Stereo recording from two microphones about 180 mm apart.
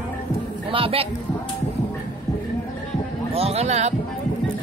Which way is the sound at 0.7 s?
30° right (ahead or behind).